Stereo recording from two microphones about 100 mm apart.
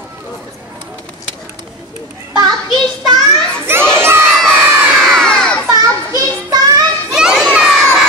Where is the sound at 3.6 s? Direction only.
25° right (ahead or behind).